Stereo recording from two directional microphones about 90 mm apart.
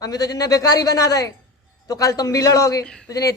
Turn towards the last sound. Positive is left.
turn(degrees=40)  # may be behind; listen again after turning